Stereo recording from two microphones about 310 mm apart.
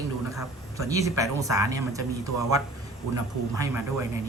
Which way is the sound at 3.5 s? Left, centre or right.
Centre.